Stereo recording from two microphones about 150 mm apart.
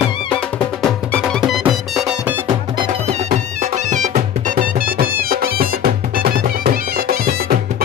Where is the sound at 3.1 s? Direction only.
50° right (ahead or behind).